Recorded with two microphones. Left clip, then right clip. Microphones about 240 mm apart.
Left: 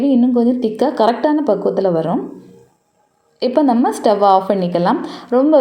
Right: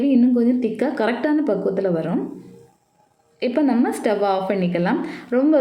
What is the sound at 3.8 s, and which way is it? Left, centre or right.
A woman's voice, centre.